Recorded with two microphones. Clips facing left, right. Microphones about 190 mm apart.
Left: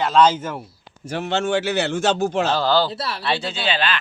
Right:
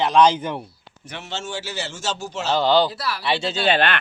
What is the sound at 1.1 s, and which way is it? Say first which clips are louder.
A man's voice: left 10 dB; 50° left (ahead or behind).